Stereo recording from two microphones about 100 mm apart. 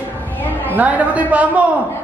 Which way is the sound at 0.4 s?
20° left (ahead or behind).